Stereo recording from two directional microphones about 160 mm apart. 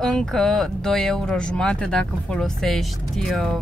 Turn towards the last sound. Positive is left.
turn(degrees=0)  # may be behind; listen again after turning